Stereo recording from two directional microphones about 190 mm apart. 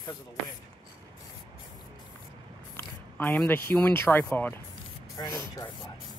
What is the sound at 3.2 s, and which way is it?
Speech, 10° left (ahead or behind).